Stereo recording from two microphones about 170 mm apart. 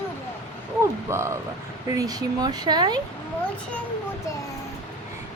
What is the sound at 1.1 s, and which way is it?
A woman's voice, 15° right (ahead or behind).